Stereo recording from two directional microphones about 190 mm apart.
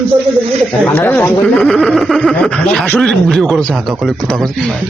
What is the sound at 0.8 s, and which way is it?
Speech, 10° left (ahead or behind).